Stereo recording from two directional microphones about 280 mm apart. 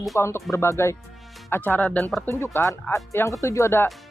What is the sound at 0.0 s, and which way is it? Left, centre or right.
Speech, centre.